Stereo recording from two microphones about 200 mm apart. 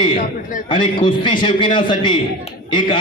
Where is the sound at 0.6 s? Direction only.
25° left (ahead or behind).